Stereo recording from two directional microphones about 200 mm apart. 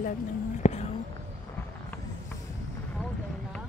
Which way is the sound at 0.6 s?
35° left (ahead or behind).